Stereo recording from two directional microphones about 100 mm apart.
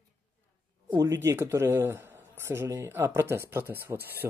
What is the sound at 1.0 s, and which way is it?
Speech, 30° right (ahead or behind).